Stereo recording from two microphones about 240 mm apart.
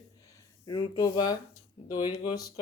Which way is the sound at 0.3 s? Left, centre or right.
Centre.